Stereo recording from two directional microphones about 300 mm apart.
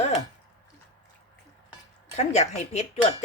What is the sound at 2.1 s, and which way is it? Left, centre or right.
Speech, left.